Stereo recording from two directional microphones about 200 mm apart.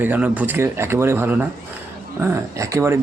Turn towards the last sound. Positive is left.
turn(degrees=-15)  # may be behind; listen again after turning